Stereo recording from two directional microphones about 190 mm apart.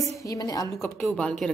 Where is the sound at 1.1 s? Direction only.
5° left (ahead or behind).